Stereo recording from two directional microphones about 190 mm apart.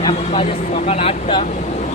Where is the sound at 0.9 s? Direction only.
30° left (ahead or behind).